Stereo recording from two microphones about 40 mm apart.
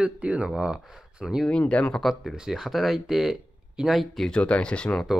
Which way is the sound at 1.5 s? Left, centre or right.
Left.